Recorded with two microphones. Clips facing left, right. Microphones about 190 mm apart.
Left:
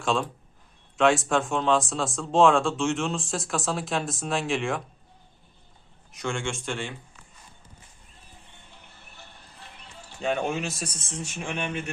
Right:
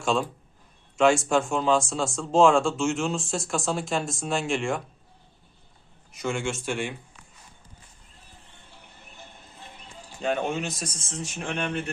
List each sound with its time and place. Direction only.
0.0 s speech: centre (ahead or behind)
6.1 s speech: 5° right (ahead or behind)
8.8 s music: 20° right (ahead or behind)
10.2 s speech: centre (ahead or behind)